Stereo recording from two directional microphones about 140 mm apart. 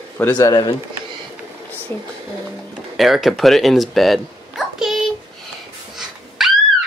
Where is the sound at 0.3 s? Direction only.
25° left (ahead or behind).